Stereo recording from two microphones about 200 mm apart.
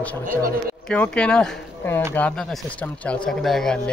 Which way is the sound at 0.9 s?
5° left (ahead or behind).